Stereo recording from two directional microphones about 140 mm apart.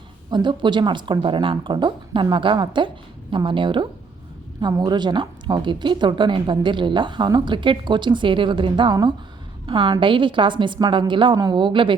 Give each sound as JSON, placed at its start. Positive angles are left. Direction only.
{"t": 0.3, "sound": "speech", "side_deg": -30}